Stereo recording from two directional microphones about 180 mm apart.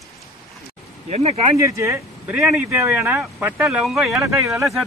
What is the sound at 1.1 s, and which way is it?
Speech, 35° right (ahead or behind).